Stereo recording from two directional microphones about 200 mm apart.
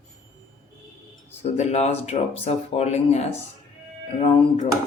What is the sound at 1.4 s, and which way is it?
Speech, 35° left (ahead or behind).